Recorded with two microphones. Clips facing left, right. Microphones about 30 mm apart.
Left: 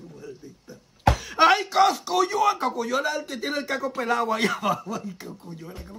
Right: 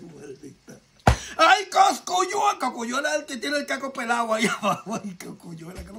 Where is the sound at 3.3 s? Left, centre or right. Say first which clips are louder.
Right 2 dB; right.